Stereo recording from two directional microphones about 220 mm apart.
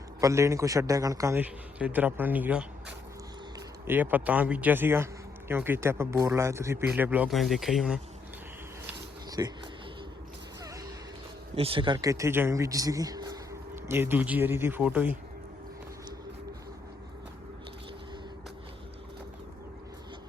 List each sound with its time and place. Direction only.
0.2 s a man's voice: 15° right (ahead or behind)
3.8 s a man's voice: 10° right (ahead or behind)
9.4 s a man's voice: 15° right (ahead or behind)
10.6 s a sound: 15° right (ahead or behind)
11.5 s a man's voice: 25° right (ahead or behind); by 15.2 s 5° right (ahead or behind)